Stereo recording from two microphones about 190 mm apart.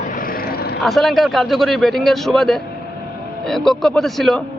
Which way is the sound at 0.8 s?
Centre (ahead or behind).